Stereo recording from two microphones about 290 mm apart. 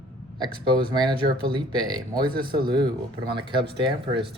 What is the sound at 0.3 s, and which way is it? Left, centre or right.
Speech, centre.